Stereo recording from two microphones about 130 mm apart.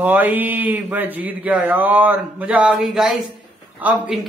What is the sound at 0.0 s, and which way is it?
Speech, 15° right (ahead or behind).